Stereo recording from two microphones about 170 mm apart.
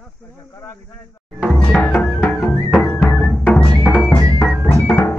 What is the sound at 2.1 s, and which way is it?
Music, 5° right (ahead or behind).